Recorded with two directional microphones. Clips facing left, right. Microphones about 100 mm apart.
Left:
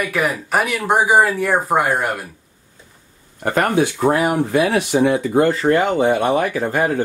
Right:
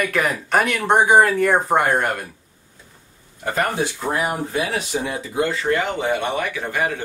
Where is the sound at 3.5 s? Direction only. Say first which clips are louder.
Left 5 dB; 60° left (ahead or behind).